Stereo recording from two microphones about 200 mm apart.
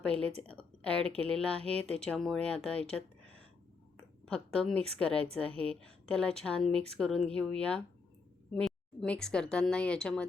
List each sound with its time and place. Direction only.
0.1 s a woman's voice: 30° right (ahead or behind)
0.4 s speech: 5° left (ahead or behind)
4.3 s a woman's voice: 5° left (ahead or behind)